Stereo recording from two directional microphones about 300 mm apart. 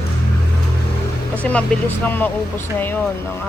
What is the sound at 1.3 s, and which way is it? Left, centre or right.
Speech, centre.